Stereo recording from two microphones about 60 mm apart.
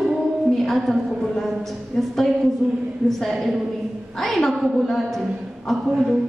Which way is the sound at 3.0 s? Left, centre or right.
Centre.